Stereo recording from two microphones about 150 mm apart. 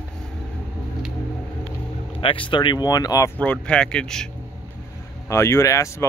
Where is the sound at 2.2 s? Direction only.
35° left (ahead or behind).